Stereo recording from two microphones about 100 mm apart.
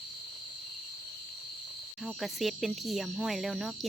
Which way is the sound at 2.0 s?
Centre (ahead or behind).